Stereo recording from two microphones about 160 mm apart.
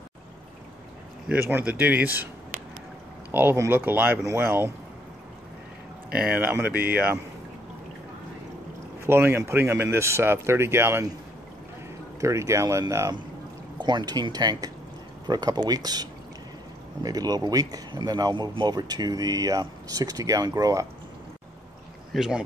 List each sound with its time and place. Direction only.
1.3 s speech: 10° right (ahead or behind)
3.3 s speech: 15° right (ahead or behind)
6.1 s speech: 10° right (ahead or behind)
9.0 s speech: 15° right (ahead or behind)
12.2 s speech: 20° right (ahead or behind)
22.1 s speech: 5° right (ahead or behind)